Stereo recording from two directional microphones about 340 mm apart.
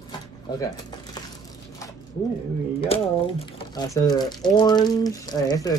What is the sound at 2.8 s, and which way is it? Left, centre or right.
Speech, centre.